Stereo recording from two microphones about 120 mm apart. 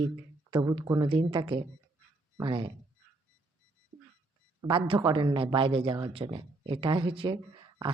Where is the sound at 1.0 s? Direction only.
40° right (ahead or behind).